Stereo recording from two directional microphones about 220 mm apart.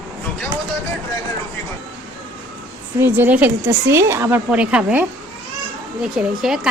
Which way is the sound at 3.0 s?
10° right (ahead or behind).